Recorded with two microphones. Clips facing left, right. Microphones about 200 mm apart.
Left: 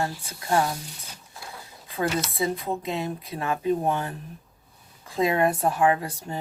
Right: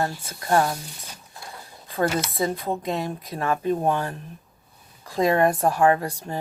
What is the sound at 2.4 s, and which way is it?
Speech, 40° right (ahead or behind).